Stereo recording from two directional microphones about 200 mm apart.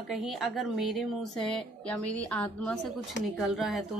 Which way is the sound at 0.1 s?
Centre (ahead or behind).